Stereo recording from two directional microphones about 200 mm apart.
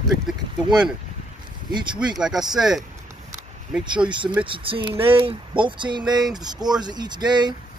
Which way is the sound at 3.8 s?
25° right (ahead or behind).